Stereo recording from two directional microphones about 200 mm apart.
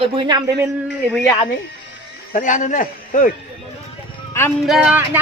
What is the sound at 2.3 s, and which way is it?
Speech, 40° left (ahead or behind).